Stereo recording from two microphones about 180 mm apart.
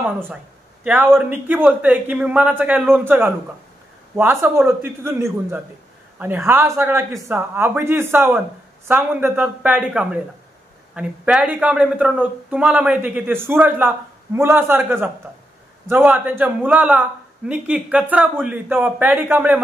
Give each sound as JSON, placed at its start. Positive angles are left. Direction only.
{"t": 0.0, "sound": "speech", "side_deg": -10}